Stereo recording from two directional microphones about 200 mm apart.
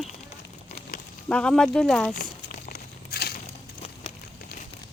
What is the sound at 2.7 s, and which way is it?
Crushing, 45° left (ahead or behind).